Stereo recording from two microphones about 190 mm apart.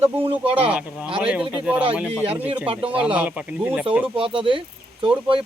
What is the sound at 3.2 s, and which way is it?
Speech, 10° right (ahead or behind).